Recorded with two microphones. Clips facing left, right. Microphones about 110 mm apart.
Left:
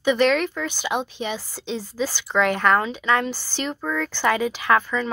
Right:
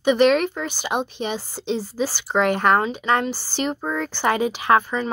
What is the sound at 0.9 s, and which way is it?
Speech, 50° right (ahead or behind).